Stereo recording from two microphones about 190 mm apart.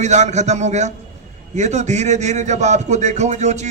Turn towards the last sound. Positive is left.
turn(degrees=-35)  # may be behind; listen again after turning